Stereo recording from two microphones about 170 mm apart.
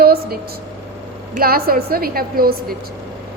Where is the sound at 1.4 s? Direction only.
60° right (ahead or behind).